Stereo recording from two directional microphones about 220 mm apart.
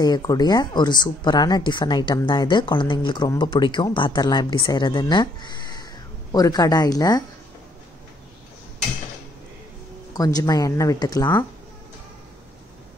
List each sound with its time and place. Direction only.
0.0 s speech: 20° left (ahead or behind)
10.1 s speech: 15° left (ahead or behind)